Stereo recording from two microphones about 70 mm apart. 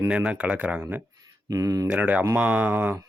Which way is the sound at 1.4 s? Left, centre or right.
Right.